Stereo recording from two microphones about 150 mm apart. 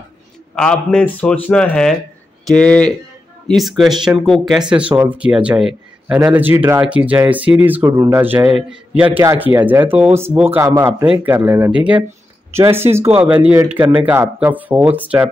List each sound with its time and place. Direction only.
0.6 s a man's voice: 5° left (ahead or behind); by 15.2 s 10° right (ahead or behind)